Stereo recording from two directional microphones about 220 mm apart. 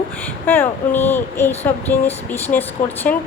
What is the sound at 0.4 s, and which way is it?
Speech, 10° left (ahead or behind).